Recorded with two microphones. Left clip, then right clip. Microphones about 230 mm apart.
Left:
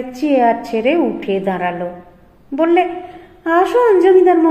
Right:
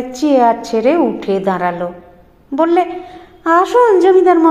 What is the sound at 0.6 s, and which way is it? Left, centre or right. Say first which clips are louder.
Speech: right 3 dB; right.